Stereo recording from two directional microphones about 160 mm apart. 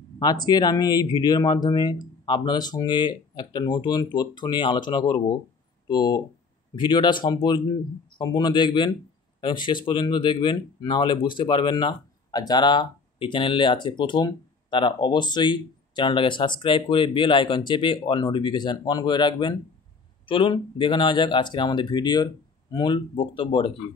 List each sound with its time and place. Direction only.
0.2 s speech: 25° left (ahead or behind)